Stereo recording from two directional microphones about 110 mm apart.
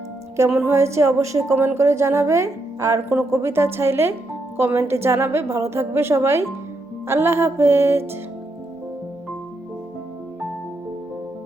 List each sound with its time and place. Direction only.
0.3 s a woman's voice: 25° right (ahead or behind)